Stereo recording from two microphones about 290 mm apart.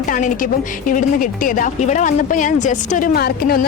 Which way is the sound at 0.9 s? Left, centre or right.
Left.